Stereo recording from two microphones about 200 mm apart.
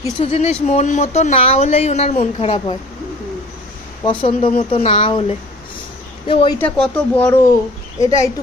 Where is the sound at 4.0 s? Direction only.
25° left (ahead or behind).